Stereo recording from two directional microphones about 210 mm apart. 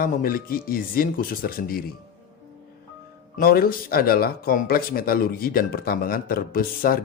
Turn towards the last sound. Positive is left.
turn(degrees=45)  # may be behind; listen again after turning